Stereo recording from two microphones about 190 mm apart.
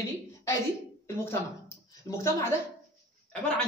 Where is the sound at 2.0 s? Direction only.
20° left (ahead or behind).